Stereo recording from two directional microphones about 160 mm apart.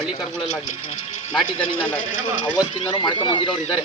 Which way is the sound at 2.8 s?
30° left (ahead or behind).